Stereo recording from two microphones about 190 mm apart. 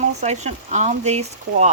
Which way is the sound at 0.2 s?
35° right (ahead or behind).